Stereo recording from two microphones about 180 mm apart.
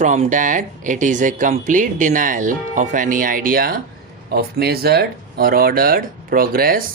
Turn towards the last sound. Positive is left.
turn(degrees=-55)  # may be behind; listen again after turning